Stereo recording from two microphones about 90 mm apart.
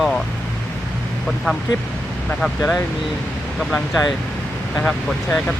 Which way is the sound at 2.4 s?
5° left (ahead or behind).